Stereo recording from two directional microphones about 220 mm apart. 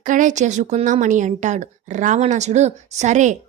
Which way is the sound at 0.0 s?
35° right (ahead or behind).